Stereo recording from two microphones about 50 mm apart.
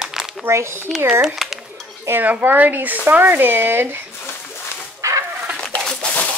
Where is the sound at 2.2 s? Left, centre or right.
Right.